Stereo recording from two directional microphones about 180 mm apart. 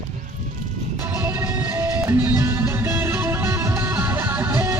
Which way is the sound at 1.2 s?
10° right (ahead or behind).